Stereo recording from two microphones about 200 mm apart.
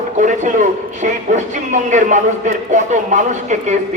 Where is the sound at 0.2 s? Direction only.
40° right (ahead or behind).